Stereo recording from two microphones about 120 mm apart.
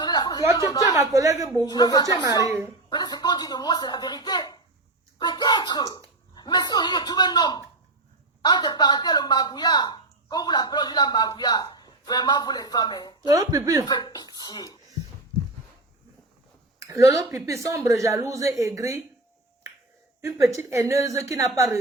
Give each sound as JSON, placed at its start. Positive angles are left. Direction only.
{"t": 0.0, "sound": "a sound", "side_deg": 35}
{"t": 0.5, "sound": "a woman's voice", "side_deg": 30}
{"t": 1.1, "sound": "a woman's voice", "side_deg": -25}
{"t": 1.6, "sound": "speech", "side_deg": 35}
{"t": 5.2, "sound": "a sound", "side_deg": 35}
{"t": 8.4, "sound": "speech", "side_deg": 35}
{"t": 13.2, "sound": "a woman's voice", "side_deg": -30}
{"t": 13.8, "sound": "speech", "side_deg": 30}
{"t": 16.8, "sound": "a woman's voice", "side_deg": -25}
{"t": 20.5, "sound": "a woman's voice", "side_deg": -25}